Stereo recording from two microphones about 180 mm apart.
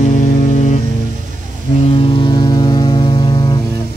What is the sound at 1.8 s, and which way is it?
Vehicle, 30° left (ahead or behind).